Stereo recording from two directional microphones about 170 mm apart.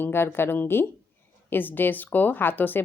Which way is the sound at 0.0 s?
15° left (ahead or behind).